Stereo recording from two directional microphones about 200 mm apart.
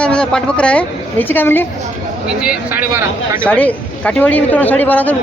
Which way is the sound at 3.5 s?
5° left (ahead or behind).